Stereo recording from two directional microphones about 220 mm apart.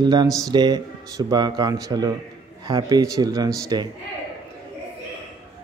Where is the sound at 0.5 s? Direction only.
20° right (ahead or behind).